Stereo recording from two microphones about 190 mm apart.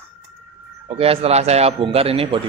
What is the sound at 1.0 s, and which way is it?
A man's voice, 30° right (ahead or behind).